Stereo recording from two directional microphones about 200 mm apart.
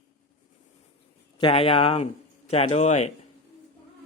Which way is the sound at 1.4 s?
30° left (ahead or behind).